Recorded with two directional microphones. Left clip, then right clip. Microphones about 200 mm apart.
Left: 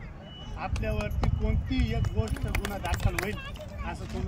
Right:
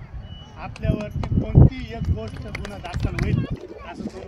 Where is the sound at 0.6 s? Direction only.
Centre (ahead or behind).